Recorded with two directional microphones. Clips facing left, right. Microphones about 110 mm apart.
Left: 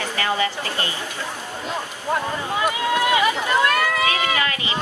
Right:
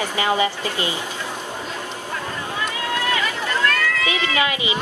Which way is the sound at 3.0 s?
15° left (ahead or behind).